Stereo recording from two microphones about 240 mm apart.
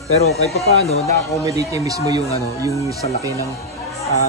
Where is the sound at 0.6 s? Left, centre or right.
Left.